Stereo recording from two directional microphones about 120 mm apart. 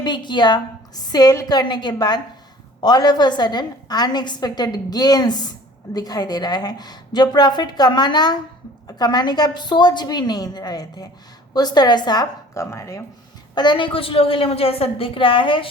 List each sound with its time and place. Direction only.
0.0 s a woman's voice: 40° left (ahead or behind)
12.7 s speech: 25° left (ahead or behind)
13.6 s a woman's voice: 40° left (ahead or behind)